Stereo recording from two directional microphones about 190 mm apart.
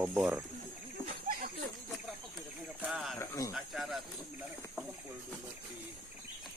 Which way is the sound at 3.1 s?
15° left (ahead or behind).